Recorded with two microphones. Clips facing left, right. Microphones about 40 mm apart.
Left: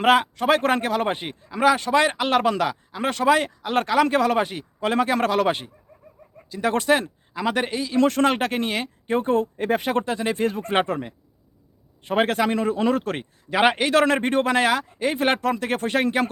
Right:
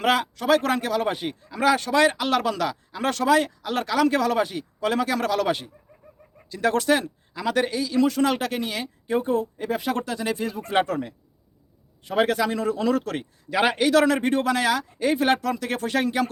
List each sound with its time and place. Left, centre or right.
0.0 s speech: left
6.7 s speech: left
7.9 s speech: left
10.4 s speech: left
10.8 s speech: left